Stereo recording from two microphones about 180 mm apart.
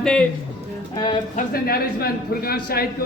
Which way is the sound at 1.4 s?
60° left (ahead or behind).